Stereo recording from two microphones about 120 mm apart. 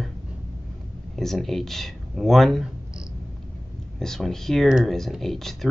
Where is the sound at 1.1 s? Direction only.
5° left (ahead or behind).